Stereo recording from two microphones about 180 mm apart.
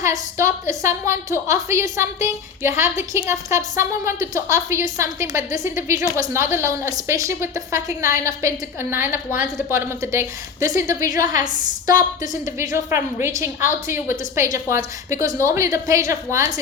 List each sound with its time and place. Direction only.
0.0 s a woman's voice: 15° right (ahead or behind)
11.2 s a woman's voice: 45° left (ahead or behind)
12.5 s a woman's voice: 15° right (ahead or behind)